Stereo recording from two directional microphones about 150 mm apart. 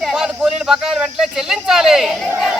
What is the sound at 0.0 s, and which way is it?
Speech, 5° right (ahead or behind).